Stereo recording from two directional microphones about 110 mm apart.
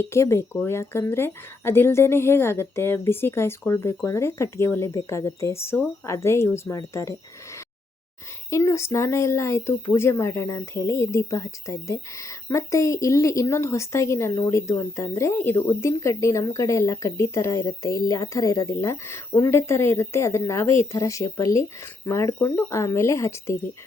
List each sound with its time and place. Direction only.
0.0 s speech: 25° left (ahead or behind)
8.4 s speech: 25° left (ahead or behind)